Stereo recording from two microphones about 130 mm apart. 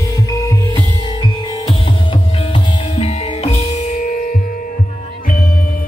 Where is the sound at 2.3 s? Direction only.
50° left (ahead or behind); by 4.4 s 90° left.